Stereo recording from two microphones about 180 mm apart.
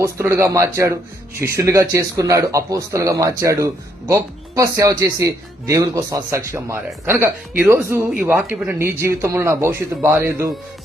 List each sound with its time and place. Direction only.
0.0 s speech: 15° right (ahead or behind)